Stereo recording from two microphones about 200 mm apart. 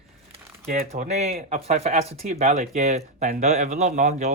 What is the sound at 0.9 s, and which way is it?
Speech, 35° right (ahead or behind).